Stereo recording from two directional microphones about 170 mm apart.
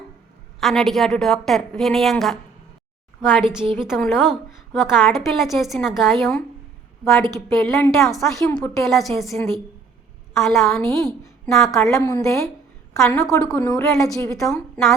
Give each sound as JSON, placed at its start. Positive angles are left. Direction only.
{"t": 0.6, "sound": "a woman's voice", "side_deg": 0}
{"t": 7.3, "sound": "a woman's voice", "side_deg": 15}
{"t": 7.7, "sound": "a woman's voice", "side_deg": 0}
{"t": 11.9, "sound": "a woman's voice", "side_deg": 20}
{"t": 13.7, "sound": "a woman's voice", "side_deg": 20}
{"t": 14.3, "sound": "a woman's voice", "side_deg": 0}